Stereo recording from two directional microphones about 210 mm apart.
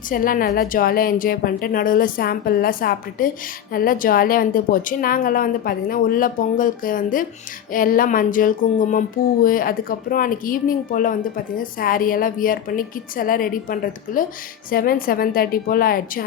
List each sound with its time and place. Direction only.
0.1 s a woman's voice: 40° left (ahead or behind)
7.7 s a sound: 40° left (ahead or behind)
14.7 s a woman's voice: 45° left (ahead or behind)